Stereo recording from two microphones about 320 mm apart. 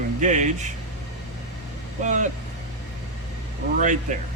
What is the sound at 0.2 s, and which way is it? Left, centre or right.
Speech, right.